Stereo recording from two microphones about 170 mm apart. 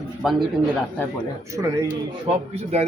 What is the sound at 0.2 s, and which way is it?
Speech, centre (ahead or behind).